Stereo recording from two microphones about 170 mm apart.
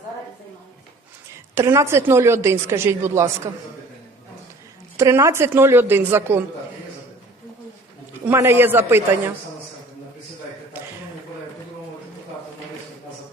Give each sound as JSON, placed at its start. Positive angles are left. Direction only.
{"t": 1.3, "sound": "a woman's voice", "side_deg": -15}
{"t": 4.9, "sound": "a woman's voice", "side_deg": -15}
{"t": 8.2, "sound": "a woman's voice", "side_deg": -15}